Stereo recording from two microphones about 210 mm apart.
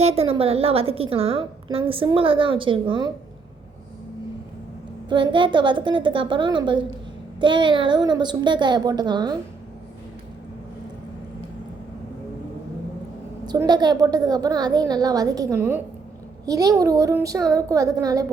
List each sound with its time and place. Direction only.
0.0 s a woman's voice: 30° right (ahead or behind)
5.0 s a woman's voice: 20° right (ahead or behind)
13.4 s a woman's voice: 20° right (ahead or behind)